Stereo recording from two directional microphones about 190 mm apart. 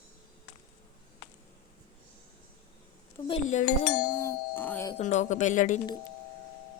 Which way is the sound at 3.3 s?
40° left (ahead or behind).